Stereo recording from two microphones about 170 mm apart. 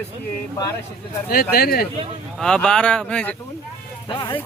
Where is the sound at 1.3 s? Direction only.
65° left (ahead or behind).